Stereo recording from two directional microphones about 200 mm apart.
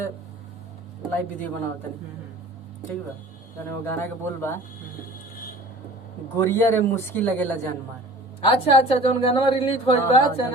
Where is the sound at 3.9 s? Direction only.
10° left (ahead or behind).